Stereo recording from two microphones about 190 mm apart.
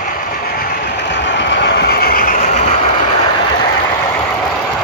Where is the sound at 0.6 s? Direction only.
70° left (ahead or behind); by 2.7 s 40° left (ahead or behind).